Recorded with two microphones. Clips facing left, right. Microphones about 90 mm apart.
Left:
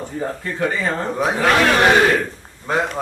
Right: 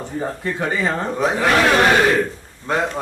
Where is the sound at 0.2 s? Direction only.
15° right (ahead or behind).